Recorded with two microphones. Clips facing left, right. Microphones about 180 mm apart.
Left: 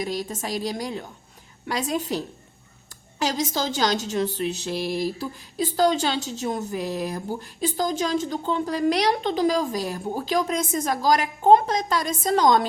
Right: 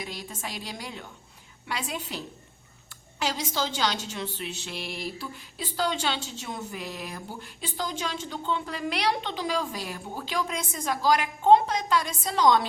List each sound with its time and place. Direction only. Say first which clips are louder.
0.0 s a woman's voice: left 9 dB; 40° left (ahead or behind)